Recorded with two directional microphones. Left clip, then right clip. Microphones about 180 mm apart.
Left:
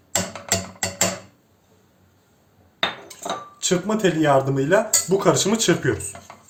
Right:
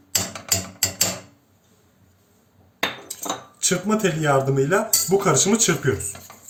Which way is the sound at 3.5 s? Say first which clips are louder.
Even; 55° left (ahead or behind).